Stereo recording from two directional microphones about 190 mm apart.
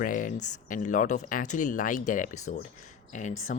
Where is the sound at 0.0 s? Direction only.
45° left (ahead or behind).